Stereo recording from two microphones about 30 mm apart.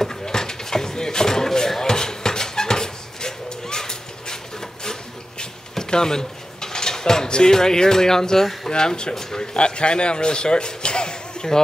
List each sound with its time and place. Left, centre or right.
0.2 s a sound: left
5.8 s dishes: left
7.2 s speech: left
7.5 s speech: centre